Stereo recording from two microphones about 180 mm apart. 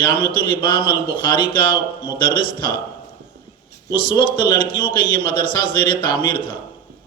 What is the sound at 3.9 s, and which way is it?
A man's voice, 25° left (ahead or behind).